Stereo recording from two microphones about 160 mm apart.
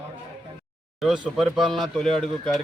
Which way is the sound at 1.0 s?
Centre (ahead or behind).